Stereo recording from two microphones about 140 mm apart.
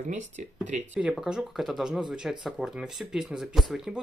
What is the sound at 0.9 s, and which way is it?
Speech, 5° right (ahead or behind).